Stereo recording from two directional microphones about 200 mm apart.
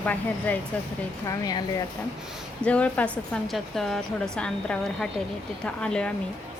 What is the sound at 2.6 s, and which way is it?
A woman's voice, 5° left (ahead or behind).